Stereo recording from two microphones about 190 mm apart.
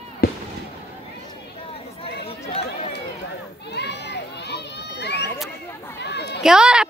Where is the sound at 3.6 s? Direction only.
60° left (ahead or behind).